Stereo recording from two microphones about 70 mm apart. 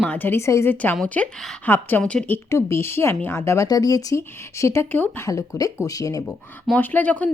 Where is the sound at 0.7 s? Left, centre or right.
Left.